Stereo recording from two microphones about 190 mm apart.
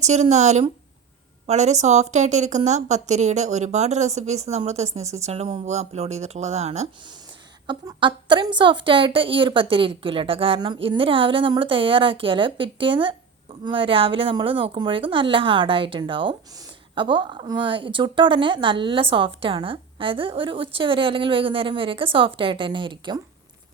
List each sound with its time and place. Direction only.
0.0 s a woman's voice: 35° right (ahead or behind)